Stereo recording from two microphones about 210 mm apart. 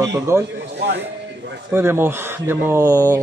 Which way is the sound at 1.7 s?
10° right (ahead or behind).